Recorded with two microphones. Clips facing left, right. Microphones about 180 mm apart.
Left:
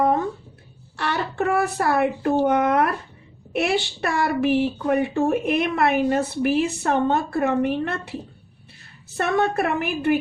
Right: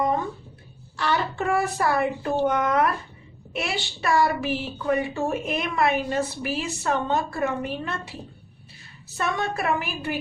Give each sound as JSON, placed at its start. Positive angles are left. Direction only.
{"t": 0.9, "sound": "a woman's voice", "side_deg": 60}
{"t": 9.1, "sound": "a woman's voice", "side_deg": 55}